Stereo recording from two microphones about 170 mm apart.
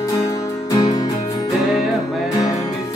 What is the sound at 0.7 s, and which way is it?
Music, 20° left (ahead or behind).